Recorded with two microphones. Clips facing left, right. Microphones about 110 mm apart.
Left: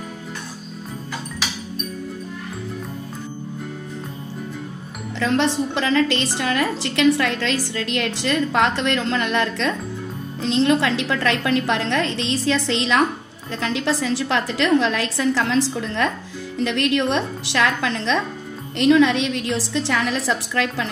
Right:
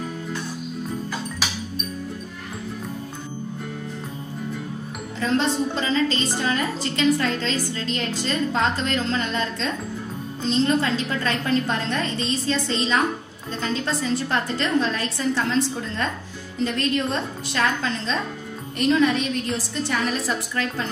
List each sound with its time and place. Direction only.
5.2 s a woman's voice: 75° left (ahead or behind); by 16.1 s 90° left
16.6 s a woman's voice: 75° left (ahead or behind)